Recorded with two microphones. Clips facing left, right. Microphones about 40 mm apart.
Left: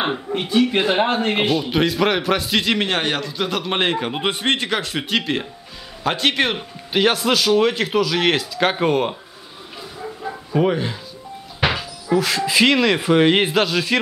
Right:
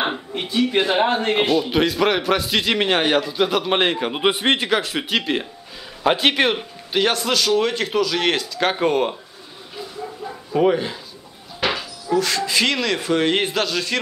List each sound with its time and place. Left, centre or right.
0.4 s a man's voice: centre
10.5 s a man's voice: centre